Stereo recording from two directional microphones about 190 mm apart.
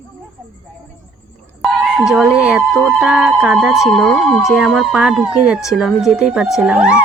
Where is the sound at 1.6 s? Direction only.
5° right (ahead or behind).